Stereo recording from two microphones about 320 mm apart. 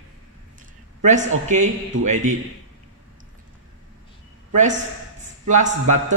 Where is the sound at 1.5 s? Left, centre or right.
Right.